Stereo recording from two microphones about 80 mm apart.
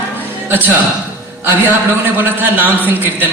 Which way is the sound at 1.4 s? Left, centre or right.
Right.